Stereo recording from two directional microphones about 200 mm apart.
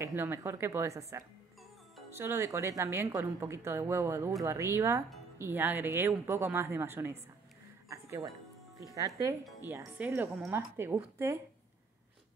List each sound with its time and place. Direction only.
0.0 s speech: 10° right (ahead or behind)